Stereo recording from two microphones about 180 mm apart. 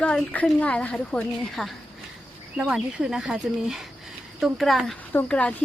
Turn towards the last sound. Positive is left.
turn(degrees=5)  # may be behind; listen again after turning